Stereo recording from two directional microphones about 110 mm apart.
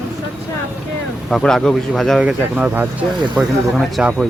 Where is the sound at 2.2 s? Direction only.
10° right (ahead or behind).